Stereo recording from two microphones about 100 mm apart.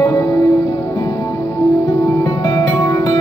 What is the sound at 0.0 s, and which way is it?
Music, 30° left (ahead or behind).